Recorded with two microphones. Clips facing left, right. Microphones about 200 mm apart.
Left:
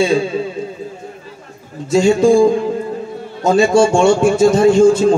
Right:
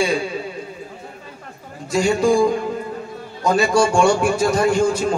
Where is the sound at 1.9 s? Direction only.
25° left (ahead or behind).